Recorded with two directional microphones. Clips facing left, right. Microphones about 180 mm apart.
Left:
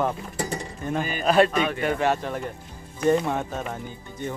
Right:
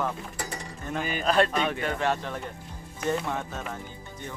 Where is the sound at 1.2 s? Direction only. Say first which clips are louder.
Left 4 dB; 10° left (ahead or behind).